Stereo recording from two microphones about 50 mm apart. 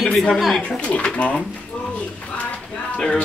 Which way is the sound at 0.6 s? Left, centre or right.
Left.